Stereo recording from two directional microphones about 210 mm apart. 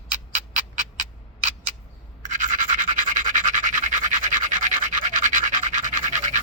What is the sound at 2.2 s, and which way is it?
Toothbrush, 40° right (ahead or behind).